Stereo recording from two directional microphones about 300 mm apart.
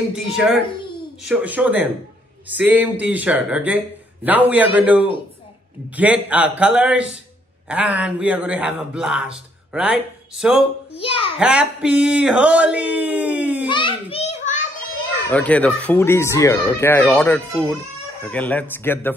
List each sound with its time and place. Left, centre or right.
0.1 s speech: centre
11.0 s a child's voice: centre
11.3 s speech: centre
13.7 s a sound: centre
14.1 s children playing: left
15.2 s speech: centre